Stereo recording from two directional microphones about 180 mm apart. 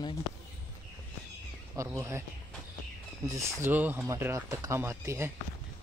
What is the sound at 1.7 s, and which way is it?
Speech, 15° right (ahead or behind).